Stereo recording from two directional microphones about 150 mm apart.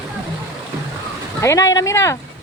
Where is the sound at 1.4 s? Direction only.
20° left (ahead or behind).